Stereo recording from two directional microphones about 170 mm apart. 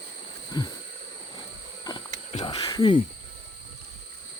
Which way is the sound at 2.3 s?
30° left (ahead or behind).